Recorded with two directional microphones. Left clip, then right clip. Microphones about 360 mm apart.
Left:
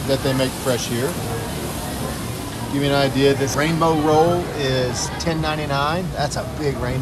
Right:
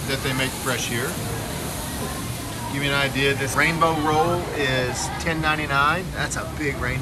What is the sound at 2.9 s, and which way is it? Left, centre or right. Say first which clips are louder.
Speech: left 4 dB; centre.